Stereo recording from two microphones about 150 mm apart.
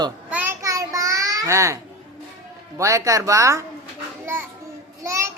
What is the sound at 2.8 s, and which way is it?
Speech, 20° right (ahead or behind).